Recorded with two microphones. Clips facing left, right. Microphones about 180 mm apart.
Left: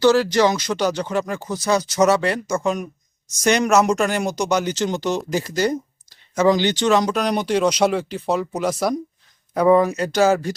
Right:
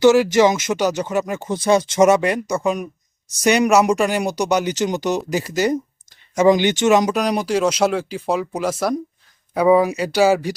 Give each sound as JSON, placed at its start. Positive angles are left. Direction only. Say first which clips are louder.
{"t": 0.0, "sound": "speech", "louder": "right 3 dB", "side_deg": -20}
{"t": 7.1, "sound": "speech", "louder": "right 1 dB", "side_deg": -10}